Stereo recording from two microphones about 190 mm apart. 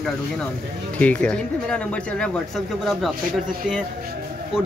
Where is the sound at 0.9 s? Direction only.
5° left (ahead or behind).